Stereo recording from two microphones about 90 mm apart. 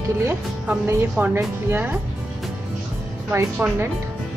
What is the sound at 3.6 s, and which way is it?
Speech, 25° right (ahead or behind).